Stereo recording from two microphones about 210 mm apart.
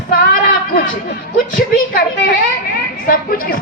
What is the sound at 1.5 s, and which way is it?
A woman's voice, 45° left (ahead or behind).